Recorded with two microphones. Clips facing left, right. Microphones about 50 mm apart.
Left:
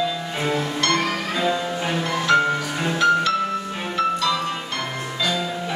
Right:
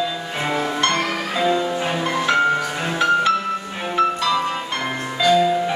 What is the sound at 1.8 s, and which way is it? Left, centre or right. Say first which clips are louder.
Music: right 2 dB; centre.